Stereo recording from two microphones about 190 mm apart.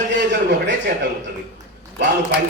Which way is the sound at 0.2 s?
70° right (ahead or behind).